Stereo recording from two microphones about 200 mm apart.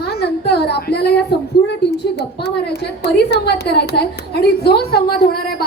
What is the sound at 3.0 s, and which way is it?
A woman's voice, 55° left (ahead or behind).